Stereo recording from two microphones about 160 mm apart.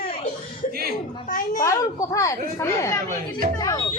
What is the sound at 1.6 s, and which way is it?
Speech, 20° left (ahead or behind).